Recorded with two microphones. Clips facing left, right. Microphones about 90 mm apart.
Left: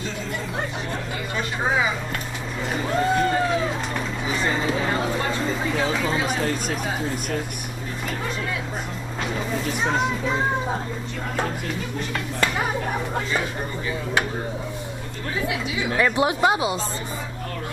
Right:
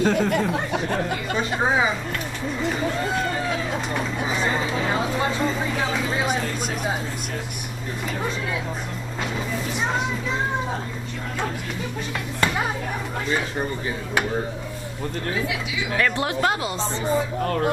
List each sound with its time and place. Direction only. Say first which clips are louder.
0.0 s speech: right 10 dB; 55° right (ahead or behind)
1.3 s a woman's voice: right 1 dB; 25° right (ahead or behind)
16.0 s speech: left 3 dB; 15° left (ahead or behind)